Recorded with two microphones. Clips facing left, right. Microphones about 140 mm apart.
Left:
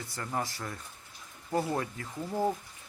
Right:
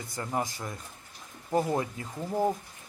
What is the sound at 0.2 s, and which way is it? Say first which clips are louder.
A man's voice: right 3 dB; 15° right (ahead or behind).